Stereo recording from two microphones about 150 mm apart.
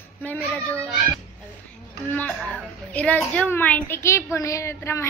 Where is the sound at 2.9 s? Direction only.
10° left (ahead or behind).